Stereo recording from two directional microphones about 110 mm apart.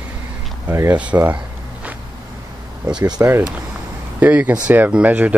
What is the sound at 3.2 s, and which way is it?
Speech, 20° right (ahead or behind).